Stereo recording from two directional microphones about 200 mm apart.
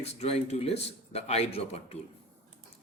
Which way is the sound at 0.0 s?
30° left (ahead or behind).